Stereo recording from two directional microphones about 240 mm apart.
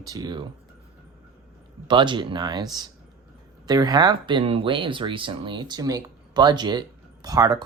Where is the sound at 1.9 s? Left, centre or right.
Centre.